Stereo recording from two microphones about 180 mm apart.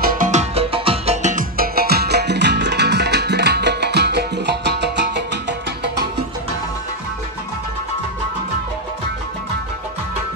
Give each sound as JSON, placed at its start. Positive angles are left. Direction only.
{"t": 0.0, "sound": "music", "side_deg": -50}